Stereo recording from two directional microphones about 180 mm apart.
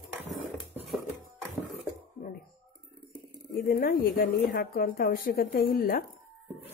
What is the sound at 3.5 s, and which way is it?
A woman's voice, 55° left (ahead or behind).